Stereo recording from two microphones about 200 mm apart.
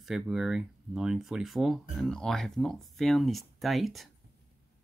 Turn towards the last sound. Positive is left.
turn(degrees=0)  # may be behind; listen again after turning